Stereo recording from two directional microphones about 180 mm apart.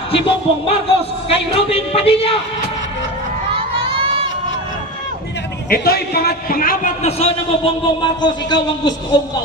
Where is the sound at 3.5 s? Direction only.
30° right (ahead or behind).